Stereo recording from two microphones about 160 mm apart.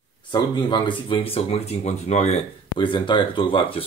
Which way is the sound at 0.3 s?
30° left (ahead or behind).